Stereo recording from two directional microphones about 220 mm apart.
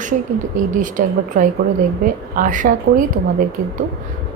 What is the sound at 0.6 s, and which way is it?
A woman's voice, 35° right (ahead or behind).